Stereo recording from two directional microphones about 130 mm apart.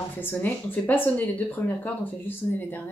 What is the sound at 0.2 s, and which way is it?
Speech, 15° left (ahead or behind).